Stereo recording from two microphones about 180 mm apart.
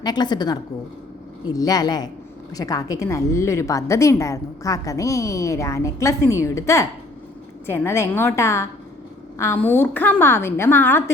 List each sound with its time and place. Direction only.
0.0 s a woman's voice: 25° left (ahead or behind)